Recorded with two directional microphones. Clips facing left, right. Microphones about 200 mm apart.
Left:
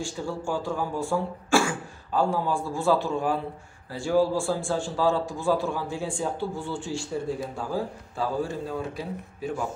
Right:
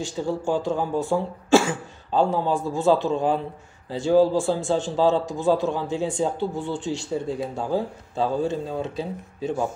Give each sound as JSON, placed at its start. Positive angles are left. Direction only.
{"t": 0.0, "sound": "a man's voice", "side_deg": -20}